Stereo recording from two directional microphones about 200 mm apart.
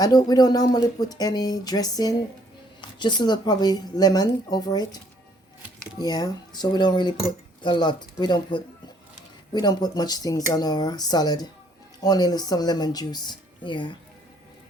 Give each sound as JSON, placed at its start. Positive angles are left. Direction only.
{"t": 0.0, "sound": "speech", "side_deg": 20}
{"t": 6.0, "sound": "speech", "side_deg": 20}